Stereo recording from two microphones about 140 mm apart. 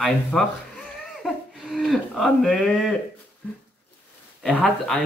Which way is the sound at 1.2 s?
Centre (ahead or behind).